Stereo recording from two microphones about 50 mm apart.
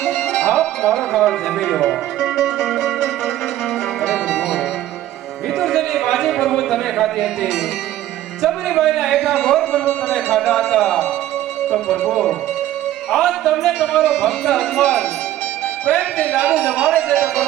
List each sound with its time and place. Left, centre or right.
0.4 s music: centre
0.8 s speech: centre
4.0 s music: centre
5.5 s a sound: centre
7.2 s a man's voice: centre
11.9 s a man's voice: centre
16.3 s speech: right
16.6 s speech: centre